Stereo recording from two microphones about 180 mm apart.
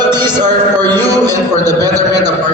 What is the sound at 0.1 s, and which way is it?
A man's voice, 25° right (ahead or behind).